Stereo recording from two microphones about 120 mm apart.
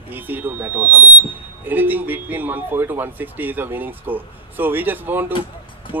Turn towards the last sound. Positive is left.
turn(degrees=-15)  # may be behind; listen again after turning